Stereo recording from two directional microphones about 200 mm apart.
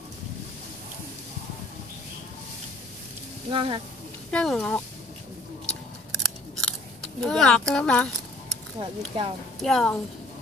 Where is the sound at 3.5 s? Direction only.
25° right (ahead or behind).